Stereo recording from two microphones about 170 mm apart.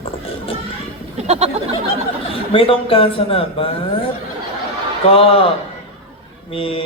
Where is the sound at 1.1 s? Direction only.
40° right (ahead or behind).